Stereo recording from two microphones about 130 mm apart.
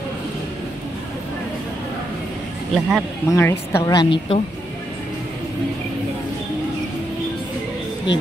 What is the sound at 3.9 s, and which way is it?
Speech, 40° left (ahead or behind).